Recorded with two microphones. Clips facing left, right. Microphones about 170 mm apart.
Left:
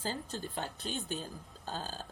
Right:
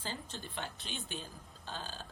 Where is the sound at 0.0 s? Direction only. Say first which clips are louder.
Left 5 dB; 40° left (ahead or behind).